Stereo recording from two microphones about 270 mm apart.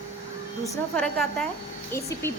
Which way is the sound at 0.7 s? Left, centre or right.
Centre.